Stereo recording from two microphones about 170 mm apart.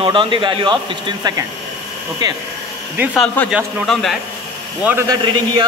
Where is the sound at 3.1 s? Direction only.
10° left (ahead or behind).